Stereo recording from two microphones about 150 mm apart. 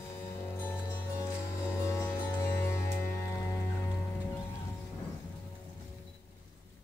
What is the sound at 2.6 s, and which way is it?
Music, 15° left (ahead or behind).